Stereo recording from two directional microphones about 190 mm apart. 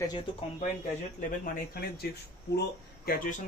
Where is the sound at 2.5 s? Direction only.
50° left (ahead or behind).